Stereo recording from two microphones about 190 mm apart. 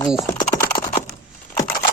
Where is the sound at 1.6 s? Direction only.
20° left (ahead or behind).